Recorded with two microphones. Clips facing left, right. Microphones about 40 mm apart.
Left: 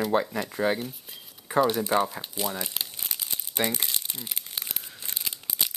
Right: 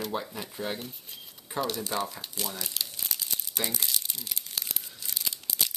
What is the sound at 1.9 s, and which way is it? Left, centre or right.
Speech, left.